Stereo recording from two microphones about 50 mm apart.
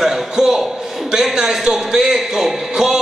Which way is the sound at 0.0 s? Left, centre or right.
Centre.